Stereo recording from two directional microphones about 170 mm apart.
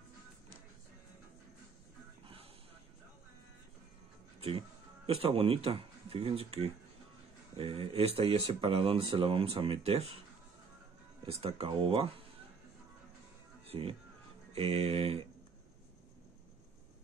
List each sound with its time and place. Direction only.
4.4 s speech: 35° right (ahead or behind)
11.2 s speech: 35° right (ahead or behind)
13.7 s speech: 35° right (ahead or behind)